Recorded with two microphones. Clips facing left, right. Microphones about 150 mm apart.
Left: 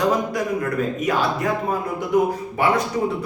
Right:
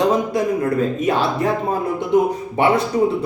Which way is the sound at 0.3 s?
25° right (ahead or behind).